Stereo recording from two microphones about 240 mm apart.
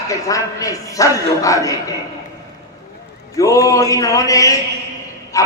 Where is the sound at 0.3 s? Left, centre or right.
Centre.